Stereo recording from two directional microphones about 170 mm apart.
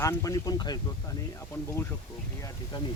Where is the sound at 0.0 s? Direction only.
20° left (ahead or behind).